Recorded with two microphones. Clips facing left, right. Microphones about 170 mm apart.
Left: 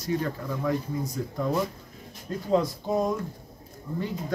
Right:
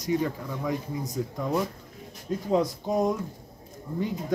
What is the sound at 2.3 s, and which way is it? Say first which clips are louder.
Speech: right 3 dB; 15° right (ahead or behind).